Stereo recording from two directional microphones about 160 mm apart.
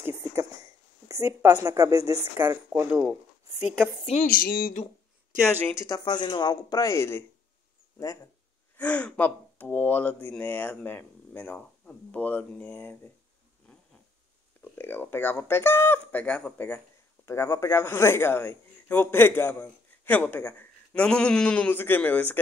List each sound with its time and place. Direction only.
0.0 s a sound: 15° right (ahead or behind)
1.0 s speech: 20° right (ahead or behind)
4.0 s speech: 45° left (ahead or behind)
4.3 s speech: 60° left (ahead or behind)
5.9 s speech: 25° left (ahead or behind)
8.7 s speech: 10° left (ahead or behind)
14.6 s speech: 10° left (ahead or behind)